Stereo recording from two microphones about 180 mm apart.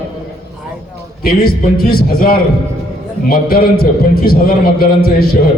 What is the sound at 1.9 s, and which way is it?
A man's voice, 55° left (ahead or behind).